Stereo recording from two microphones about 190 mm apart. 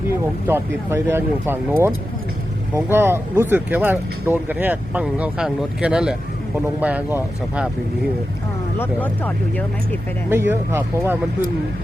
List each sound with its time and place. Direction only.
0.1 s speech: 15° right (ahead or behind)
8.8 s speech: 10° left (ahead or behind)
10.2 s speech: 10° right (ahead or behind)